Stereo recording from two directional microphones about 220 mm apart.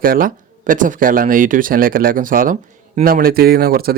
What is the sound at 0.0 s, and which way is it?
Speech, 40° right (ahead or behind).